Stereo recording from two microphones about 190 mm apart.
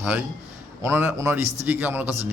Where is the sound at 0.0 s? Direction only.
10° right (ahead or behind).